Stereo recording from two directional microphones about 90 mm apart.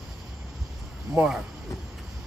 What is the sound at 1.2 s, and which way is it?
Speech, 30° right (ahead or behind).